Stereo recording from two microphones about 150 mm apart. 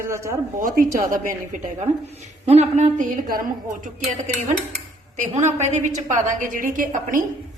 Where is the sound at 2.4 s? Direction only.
45° right (ahead or behind).